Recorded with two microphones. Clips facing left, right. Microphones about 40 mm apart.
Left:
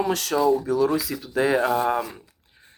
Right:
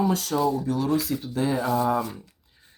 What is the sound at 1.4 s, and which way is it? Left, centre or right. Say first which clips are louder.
Speech: left 6 dB; left.